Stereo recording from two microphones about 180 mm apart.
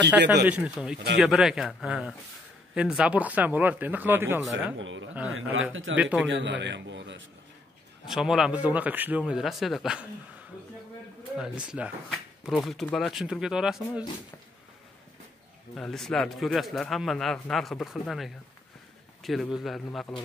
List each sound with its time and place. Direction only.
0.5 s speech: 5° right (ahead or behind)
4.7 s a man's voice: 90° right
5.9 s speech: 10° right (ahead or behind)
6.2 s a man's voice: 90° right
8.1 s speech: centre (ahead or behind)
11.3 s speech: 5° right (ahead or behind)
15.7 s speech: centre (ahead or behind)